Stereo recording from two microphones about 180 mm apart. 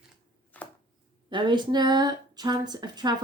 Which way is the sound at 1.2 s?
25° right (ahead or behind).